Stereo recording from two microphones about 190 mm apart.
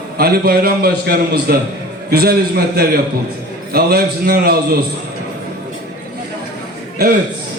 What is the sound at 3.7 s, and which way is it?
Speech, 55° right (ahead or behind).